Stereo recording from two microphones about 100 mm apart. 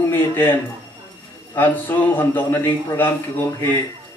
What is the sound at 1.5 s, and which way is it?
A man's voice, 20° left (ahead or behind).